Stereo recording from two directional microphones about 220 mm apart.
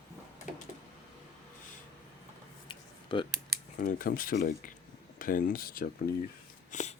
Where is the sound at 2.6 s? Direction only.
20° left (ahead or behind).